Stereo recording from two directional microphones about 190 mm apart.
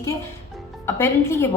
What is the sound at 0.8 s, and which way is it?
Speech, 15° left (ahead or behind).